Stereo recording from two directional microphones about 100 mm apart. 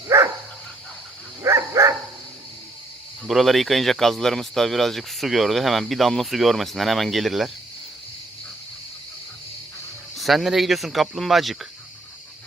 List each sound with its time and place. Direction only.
0.1 s dog: 25° right (ahead or behind)
1.5 s dog: 30° right (ahead or behind)
3.2 s speech: centre (ahead or behind)
10.2 s speech: centre (ahead or behind)